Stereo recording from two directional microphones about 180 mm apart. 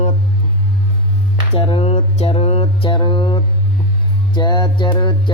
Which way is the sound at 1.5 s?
30° left (ahead or behind).